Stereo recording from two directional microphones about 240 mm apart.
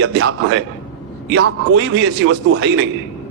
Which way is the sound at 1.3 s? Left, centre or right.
Right.